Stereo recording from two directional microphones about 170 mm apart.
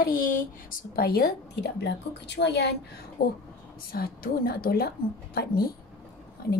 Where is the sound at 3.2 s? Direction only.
70° left (ahead or behind).